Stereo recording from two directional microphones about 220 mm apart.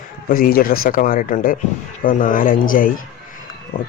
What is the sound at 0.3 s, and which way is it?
Speech, 40° left (ahead or behind).